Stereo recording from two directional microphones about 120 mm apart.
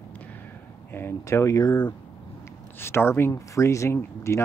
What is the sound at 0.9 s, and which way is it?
Speech, 20° left (ahead or behind).